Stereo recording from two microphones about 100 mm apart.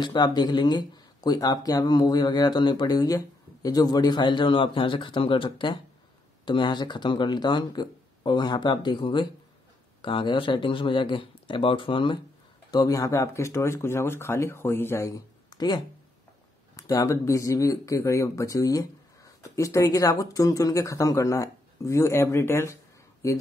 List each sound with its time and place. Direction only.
0.0 s speech: 45° left (ahead or behind)
12.7 s speech: 35° left (ahead or behind)